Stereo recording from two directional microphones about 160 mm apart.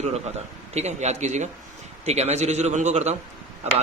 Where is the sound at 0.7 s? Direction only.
45° right (ahead or behind).